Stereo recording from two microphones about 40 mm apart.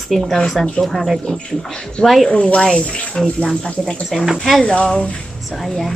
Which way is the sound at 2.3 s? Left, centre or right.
Left.